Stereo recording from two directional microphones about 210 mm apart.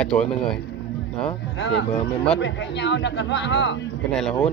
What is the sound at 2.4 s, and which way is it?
Speech, 60° left (ahead or behind).